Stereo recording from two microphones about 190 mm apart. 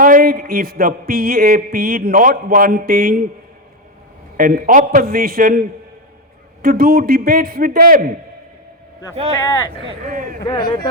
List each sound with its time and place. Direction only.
0.0 s a man's voice: 50° right (ahead or behind)
4.4 s a man's voice: 45° right (ahead or behind)
10.1 s a man's voice: 45° right (ahead or behind)
10.4 s speech: 20° left (ahead or behind)